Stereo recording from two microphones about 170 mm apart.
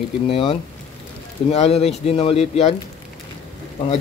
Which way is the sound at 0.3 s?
30° left (ahead or behind).